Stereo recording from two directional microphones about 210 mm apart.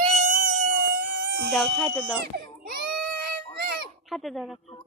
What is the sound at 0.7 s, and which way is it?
Music, 55° right (ahead or behind).